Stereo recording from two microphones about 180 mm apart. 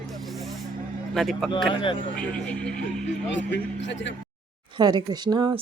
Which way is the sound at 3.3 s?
85° left.